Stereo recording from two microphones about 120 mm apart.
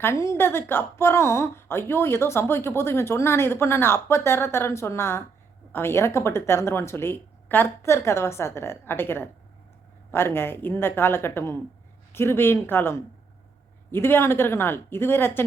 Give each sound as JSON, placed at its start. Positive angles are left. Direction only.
{"t": 0.0, "sound": "a woman's voice", "side_deg": 25}